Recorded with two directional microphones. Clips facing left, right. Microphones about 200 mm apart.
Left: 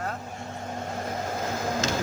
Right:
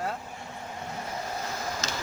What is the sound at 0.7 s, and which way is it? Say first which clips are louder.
Vehicle: left 4 dB; 50° left (ahead or behind).